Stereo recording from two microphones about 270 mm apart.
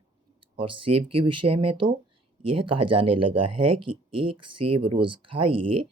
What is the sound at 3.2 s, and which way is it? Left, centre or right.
Speech, centre.